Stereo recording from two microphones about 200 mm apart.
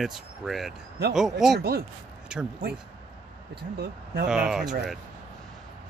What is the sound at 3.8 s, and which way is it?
Speech, 55° right (ahead or behind).